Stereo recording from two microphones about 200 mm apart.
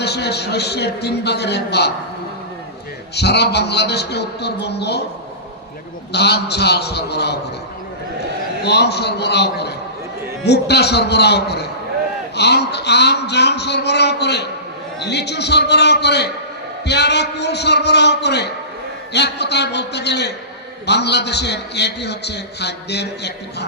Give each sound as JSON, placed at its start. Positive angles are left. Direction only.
{"t": 0.0, "sound": "a man's voice", "side_deg": 55}
{"t": 3.2, "sound": "a man's voice", "side_deg": 55}
{"t": 6.1, "sound": "a man's voice", "side_deg": 55}
{"t": 8.6, "sound": "a man's voice", "side_deg": 55}